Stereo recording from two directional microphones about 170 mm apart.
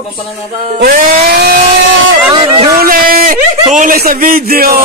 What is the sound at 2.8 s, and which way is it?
A man's voice, 60° right (ahead or behind).